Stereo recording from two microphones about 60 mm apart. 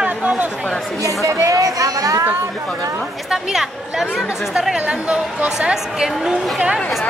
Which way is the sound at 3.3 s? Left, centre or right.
Centre.